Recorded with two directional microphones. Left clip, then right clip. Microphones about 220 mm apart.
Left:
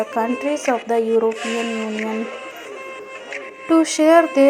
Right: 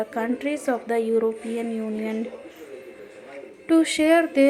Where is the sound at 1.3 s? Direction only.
50° left (ahead or behind).